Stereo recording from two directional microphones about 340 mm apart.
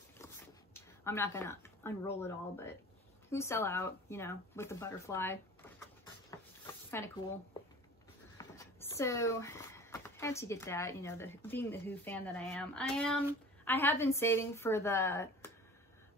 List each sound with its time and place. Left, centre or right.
0.2 s zipper: centre
3.3 s speech: centre
6.6 s a sound: centre
8.4 s speech: centre